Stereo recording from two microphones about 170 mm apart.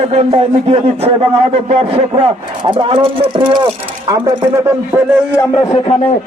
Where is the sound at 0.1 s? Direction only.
35° right (ahead or behind).